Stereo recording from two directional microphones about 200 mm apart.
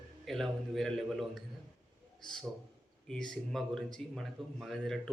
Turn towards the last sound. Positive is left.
turn(degrees=0)  # may be behind; listen again after turning